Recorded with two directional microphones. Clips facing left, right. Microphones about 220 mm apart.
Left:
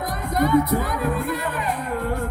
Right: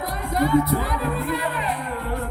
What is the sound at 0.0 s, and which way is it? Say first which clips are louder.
Speech: left 1 dB; 45° left (ahead or behind).